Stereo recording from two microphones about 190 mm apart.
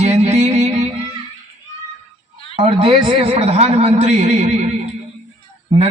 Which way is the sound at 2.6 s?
30° right (ahead or behind).